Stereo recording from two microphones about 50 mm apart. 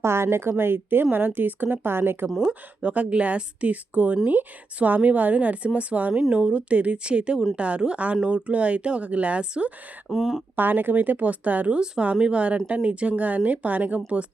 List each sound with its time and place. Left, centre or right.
0.0 s a woman's voice: right
2.5 s speech: right
10.1 s speech: centre
10.5 s speech: right